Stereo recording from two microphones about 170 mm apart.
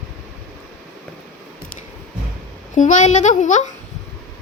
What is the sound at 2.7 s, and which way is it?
A child's voice, 45° left (ahead or behind).